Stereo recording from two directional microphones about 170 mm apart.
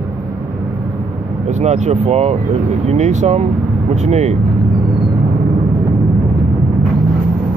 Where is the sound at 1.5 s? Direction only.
40° right (ahead or behind).